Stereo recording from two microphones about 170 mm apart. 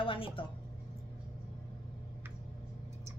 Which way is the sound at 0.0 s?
30° left (ahead or behind).